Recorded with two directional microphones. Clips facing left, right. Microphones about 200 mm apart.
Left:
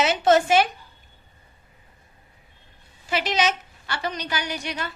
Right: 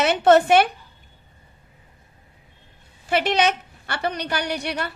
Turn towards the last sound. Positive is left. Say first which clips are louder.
# right 4 dB
turn(degrees=-60)  # may be behind; listen again after turning